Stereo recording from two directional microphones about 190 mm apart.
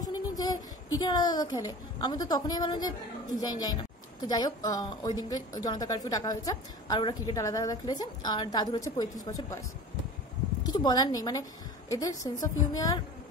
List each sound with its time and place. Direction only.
0.0 s a woman's voice: 20° left (ahead or behind)
10.7 s a woman's voice: 20° left (ahead or behind)